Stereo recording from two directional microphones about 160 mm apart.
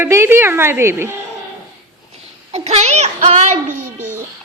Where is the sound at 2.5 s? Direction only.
45° right (ahead or behind).